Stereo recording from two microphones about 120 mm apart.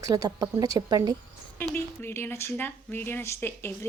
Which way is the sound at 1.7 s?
20° left (ahead or behind).